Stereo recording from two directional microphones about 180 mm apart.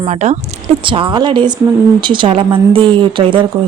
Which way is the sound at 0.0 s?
40° right (ahead or behind).